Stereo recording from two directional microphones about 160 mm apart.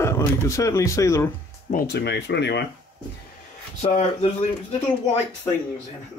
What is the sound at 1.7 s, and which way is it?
Speech, 75° left (ahead or behind).